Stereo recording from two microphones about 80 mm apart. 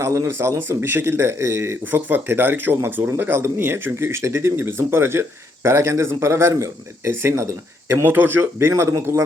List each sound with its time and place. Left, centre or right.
0.0 s speech: right
2.0 s speech: right